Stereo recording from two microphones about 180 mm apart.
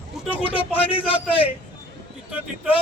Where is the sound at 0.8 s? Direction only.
30° left (ahead or behind).